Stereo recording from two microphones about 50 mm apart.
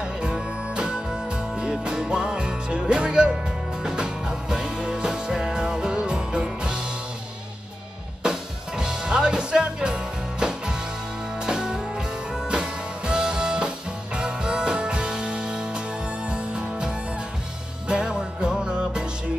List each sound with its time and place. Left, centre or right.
0.0 s music: centre
8.2 s music: centre